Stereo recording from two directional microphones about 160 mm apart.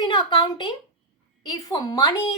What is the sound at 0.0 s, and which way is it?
A woman's voice, 30° left (ahead or behind).